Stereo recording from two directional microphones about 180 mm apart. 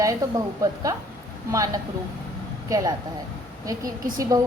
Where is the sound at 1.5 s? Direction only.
20° right (ahead or behind).